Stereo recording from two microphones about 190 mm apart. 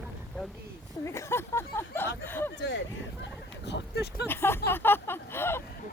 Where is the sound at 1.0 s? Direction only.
15° left (ahead or behind).